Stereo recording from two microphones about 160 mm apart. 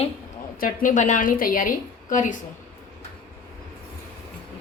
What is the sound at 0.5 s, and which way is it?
A woman's voice, 60° left (ahead or behind).